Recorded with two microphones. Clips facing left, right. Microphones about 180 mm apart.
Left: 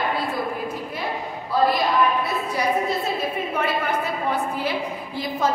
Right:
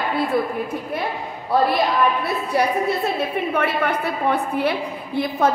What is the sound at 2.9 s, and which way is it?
A woman's voice, 65° right (ahead or behind).